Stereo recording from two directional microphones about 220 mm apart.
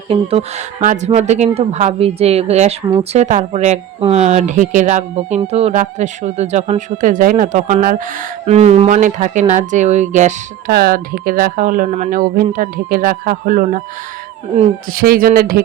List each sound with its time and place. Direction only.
0.1 s speech: 25° right (ahead or behind)
10.7 s speech: 45° right (ahead or behind)
14.9 s speech: 40° right (ahead or behind)